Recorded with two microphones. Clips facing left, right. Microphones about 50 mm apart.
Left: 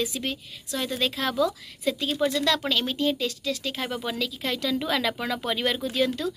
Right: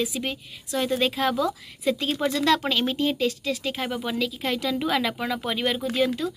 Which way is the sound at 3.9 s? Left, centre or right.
Centre.